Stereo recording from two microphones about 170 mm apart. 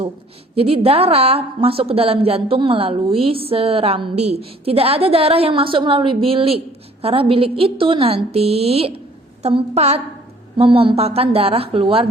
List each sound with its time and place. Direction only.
0.5 s a woman's voice: 35° right (ahead or behind)